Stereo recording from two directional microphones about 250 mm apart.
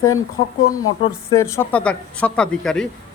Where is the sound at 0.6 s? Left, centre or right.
Left.